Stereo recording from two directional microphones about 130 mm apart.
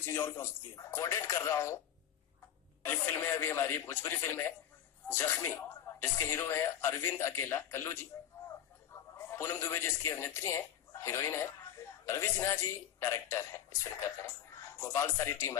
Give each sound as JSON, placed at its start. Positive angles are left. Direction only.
{"t": 0.0, "sound": "speech", "side_deg": 20}
{"t": 2.8, "sound": "a man's voice", "side_deg": 15}